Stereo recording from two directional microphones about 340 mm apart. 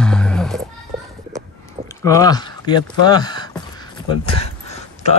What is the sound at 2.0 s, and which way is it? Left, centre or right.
Speech, centre.